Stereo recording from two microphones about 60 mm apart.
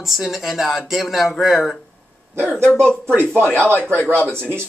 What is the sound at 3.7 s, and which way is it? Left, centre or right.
Speech, left.